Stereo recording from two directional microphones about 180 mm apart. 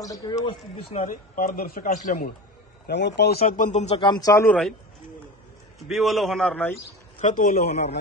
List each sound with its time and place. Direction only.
0.0 s a man's voice: 20° left (ahead or behind)
1.0 s a man's voice: 50° left (ahead or behind)
2.9 s a man's voice: 70° left (ahead or behind)
3.4 s a man's voice: 45° left (ahead or behind); by 4.6 s 15° left (ahead or behind)
5.8 s a man's voice: centre (ahead or behind)
7.2 s a man's voice: 45° left (ahead or behind)